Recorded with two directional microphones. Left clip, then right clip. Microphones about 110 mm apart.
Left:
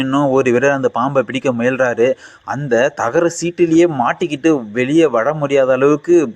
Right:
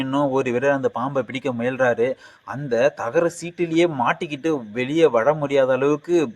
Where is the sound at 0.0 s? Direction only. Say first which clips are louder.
Left 7 dB; 25° left (ahead or behind).